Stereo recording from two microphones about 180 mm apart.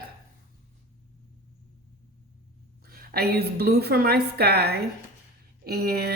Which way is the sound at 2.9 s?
60° right (ahead or behind).